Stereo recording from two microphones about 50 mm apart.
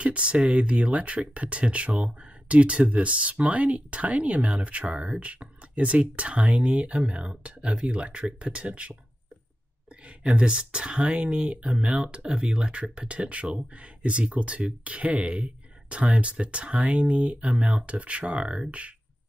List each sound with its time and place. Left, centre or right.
0.0 s speech: right
10.0 s speech: right